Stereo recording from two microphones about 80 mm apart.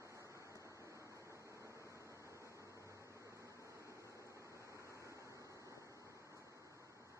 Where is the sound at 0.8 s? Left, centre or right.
Right.